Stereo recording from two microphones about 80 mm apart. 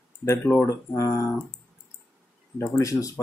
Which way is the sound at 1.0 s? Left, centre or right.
Left.